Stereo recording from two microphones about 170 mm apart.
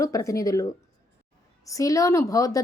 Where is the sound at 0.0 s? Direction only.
20° left (ahead or behind).